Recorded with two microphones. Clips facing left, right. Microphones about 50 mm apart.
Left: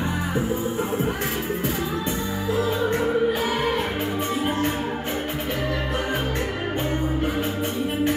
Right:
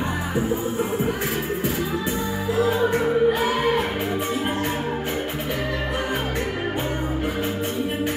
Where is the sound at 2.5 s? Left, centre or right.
Centre.